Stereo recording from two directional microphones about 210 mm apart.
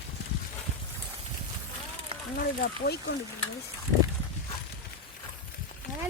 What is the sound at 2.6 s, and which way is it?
Speech, 50° left (ahead or behind).